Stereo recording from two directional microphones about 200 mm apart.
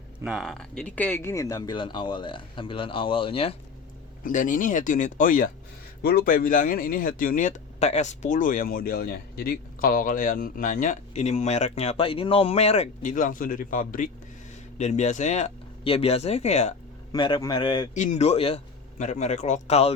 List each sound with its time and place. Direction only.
0.2 s speech: 5° right (ahead or behind); by 3.5 s 25° left (ahead or behind)
4.2 s speech: 40° left (ahead or behind)
17.1 s speech: 20° left (ahead or behind)
17.9 s speech: 40° left (ahead or behind)